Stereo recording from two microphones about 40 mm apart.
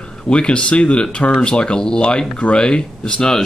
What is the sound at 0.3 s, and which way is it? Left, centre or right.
Speech, left.